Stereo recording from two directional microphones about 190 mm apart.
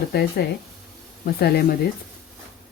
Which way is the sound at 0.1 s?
55° left (ahead or behind).